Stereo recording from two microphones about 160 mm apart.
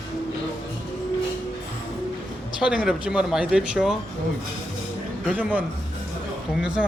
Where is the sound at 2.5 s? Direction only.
5° right (ahead or behind).